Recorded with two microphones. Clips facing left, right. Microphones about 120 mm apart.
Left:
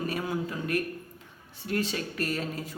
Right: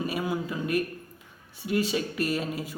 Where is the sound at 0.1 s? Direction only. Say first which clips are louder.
Right 1 dB; 10° right (ahead or behind).